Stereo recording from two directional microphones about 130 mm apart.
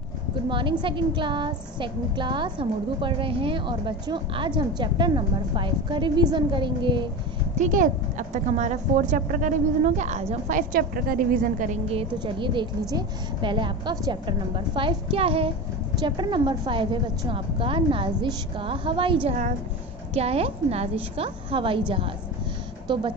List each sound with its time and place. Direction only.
0.5 s a woman's voice: 40° right (ahead or behind)
7.5 s a woman's voice: 75° right (ahead or behind)
10.5 s a woman's voice: 90° right
12.2 s a woman's voice: 40° right (ahead or behind)